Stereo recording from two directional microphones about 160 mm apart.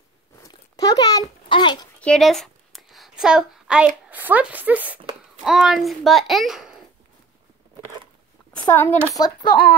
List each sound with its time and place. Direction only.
0.4 s a sound: 25° left (ahead or behind)
2.0 s a woman's voice: 5° left (ahead or behind)
8.6 s speech: 20° left (ahead or behind)
9.5 s speech: 70° left (ahead or behind)